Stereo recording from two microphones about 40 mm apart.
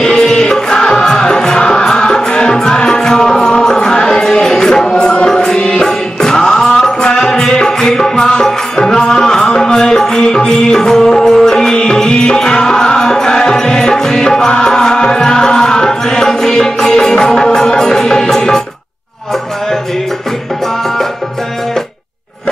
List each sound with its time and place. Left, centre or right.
0.0 s music: centre